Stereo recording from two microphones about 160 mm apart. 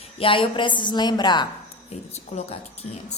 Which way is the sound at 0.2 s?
35° left (ahead or behind).